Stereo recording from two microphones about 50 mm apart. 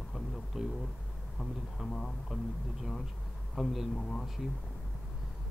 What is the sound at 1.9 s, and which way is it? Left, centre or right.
Speech, centre.